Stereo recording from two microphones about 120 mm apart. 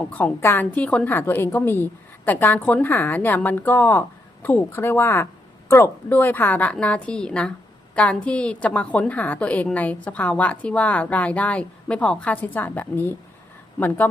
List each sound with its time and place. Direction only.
0.1 s a woman's voice: 15° left (ahead or behind)